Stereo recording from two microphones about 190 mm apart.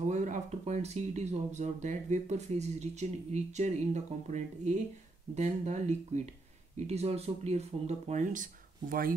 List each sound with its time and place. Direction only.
0.1 s speech: 40° right (ahead or behind)